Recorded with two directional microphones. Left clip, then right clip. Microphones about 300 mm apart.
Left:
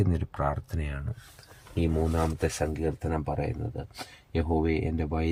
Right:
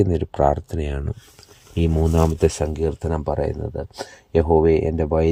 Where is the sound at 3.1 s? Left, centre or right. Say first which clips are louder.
Right 8 dB; right.